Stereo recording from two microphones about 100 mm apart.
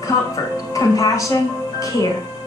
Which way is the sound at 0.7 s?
35° left (ahead or behind).